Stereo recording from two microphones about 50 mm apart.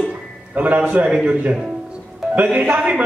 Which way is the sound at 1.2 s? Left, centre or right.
Right.